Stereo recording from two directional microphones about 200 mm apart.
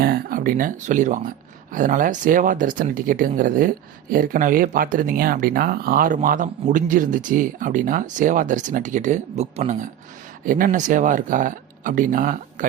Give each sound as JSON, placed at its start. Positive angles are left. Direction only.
{"t": 0.0, "sound": "speech", "side_deg": -45}